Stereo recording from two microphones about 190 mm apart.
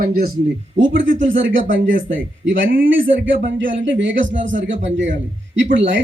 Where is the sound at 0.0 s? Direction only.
50° right (ahead or behind).